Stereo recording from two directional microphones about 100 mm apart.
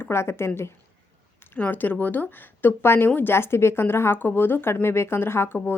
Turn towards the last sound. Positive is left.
turn(degrees=20)  # may be behind; listen again after turning